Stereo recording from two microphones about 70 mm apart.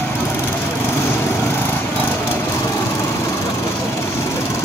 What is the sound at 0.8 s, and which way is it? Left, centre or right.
Lawn mower, left.